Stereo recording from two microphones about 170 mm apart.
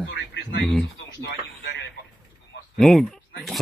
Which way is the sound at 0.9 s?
90° left.